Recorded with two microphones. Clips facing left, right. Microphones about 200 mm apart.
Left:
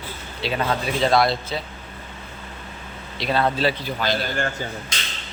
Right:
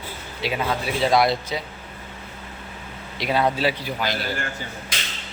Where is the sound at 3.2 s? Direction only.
10° right (ahead or behind).